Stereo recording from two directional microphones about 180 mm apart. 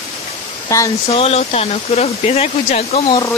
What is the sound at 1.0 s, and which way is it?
Speech, 30° left (ahead or behind).